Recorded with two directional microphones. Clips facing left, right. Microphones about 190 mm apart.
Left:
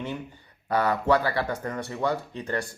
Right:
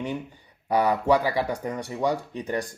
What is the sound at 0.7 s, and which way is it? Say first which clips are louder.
Speech: right 2 dB; 15° right (ahead or behind).